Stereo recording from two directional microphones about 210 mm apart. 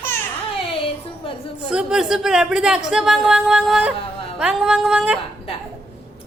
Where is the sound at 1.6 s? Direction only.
5° right (ahead or behind).